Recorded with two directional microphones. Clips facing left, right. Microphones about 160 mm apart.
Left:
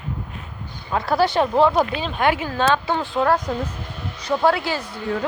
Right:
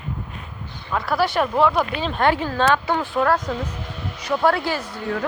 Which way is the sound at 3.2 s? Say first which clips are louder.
Left 2 dB; 15° left (ahead or behind).